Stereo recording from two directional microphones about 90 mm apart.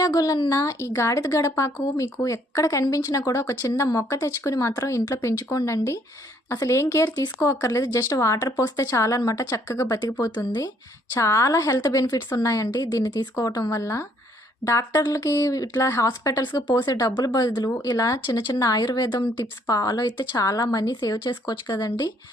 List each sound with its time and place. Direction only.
0.0 s speech: 40° left (ahead or behind)
11.1 s speech: 35° left (ahead or behind)
18.3 s speech: 55° left (ahead or behind)
18.5 s speech: 45° left (ahead or behind)
19.6 s speech: 45° left (ahead or behind)
20.4 s speech: 40° left (ahead or behind)
20.9 s speech: 55° left (ahead or behind)